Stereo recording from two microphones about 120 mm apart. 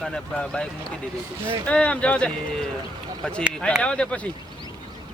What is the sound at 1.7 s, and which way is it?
Speech, 10° left (ahead or behind).